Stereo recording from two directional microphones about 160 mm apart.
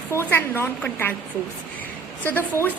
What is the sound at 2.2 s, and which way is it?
Speech, 10° left (ahead or behind).